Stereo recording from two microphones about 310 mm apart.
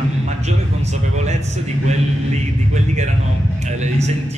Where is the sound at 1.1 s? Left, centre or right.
Right.